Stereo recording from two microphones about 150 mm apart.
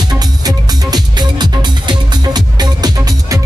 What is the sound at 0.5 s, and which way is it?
Music, 25° right (ahead or behind).